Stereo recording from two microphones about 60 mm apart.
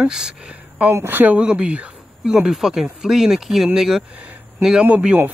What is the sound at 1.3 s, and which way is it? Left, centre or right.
Speech, centre.